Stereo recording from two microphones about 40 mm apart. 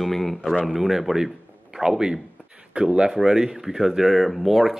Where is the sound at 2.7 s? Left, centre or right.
Right.